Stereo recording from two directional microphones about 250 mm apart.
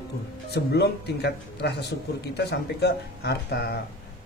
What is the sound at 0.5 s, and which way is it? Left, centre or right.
A man's voice, left.